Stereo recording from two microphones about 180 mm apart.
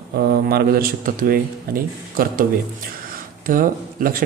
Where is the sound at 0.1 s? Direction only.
60° right (ahead or behind).